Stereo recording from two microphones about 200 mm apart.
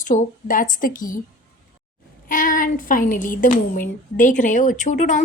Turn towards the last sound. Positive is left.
turn(degrees=40)  # may be behind; listen again after turning